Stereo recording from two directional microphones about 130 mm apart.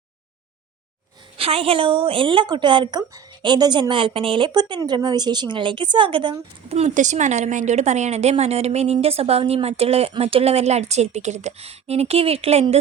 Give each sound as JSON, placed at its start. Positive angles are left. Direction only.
{"t": 1.4, "sound": "a woman's voice", "side_deg": -45}
{"t": 6.7, "sound": "speech", "side_deg": -50}
{"t": 6.9, "sound": "a woman's voice", "side_deg": -70}